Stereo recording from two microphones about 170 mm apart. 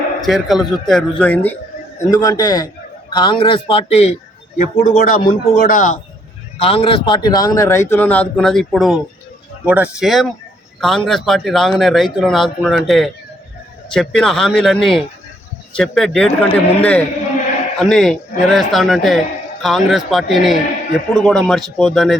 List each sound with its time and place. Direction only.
0.2 s a man's voice: centre (ahead or behind)
2.0 s a man's voice: 20° left (ahead or behind); by 4.1 s 35° left (ahead or behind)
4.5 s a man's voice: 55° left (ahead or behind)
6.6 s a man's voice: 35° left (ahead or behind); by 22.2 s centre (ahead or behind)